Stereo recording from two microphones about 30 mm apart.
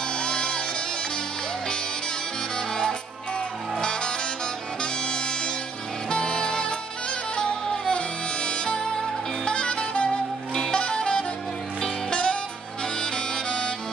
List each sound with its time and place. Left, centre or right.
0.1 s music: left
2.7 s music: left
10.7 s saxophone: left
12.1 s music: left
13.0 s music: left